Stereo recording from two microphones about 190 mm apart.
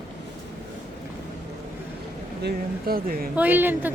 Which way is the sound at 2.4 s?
50° right (ahead or behind).